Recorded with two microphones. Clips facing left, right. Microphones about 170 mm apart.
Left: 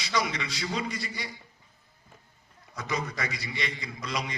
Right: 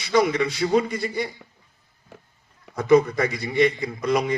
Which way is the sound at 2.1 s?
75° right (ahead or behind).